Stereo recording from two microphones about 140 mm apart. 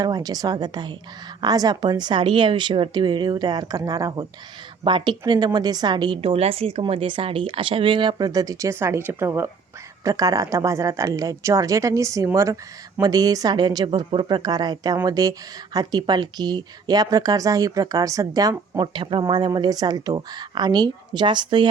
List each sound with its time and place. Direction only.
0.0 s a woman's voice: 30° right (ahead or behind)